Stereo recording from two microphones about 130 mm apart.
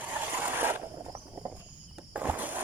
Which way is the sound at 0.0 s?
15° right (ahead or behind).